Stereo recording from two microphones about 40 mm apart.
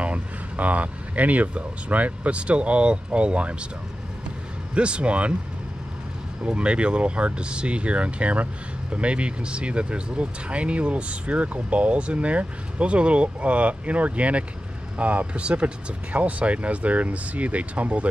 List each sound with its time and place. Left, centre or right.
0.0 s speech: right
4.7 s speech: right
6.4 s speech: right